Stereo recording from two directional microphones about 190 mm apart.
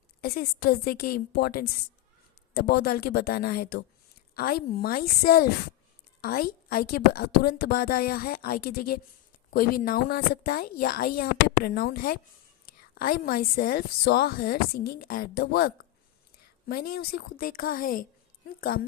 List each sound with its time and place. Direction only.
0.2 s a woman's voice: 50° left (ahead or behind)